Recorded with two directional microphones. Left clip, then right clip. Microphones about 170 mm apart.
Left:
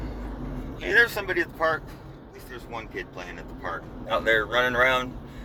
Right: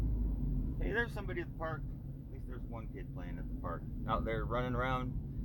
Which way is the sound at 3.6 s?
25° right (ahead or behind).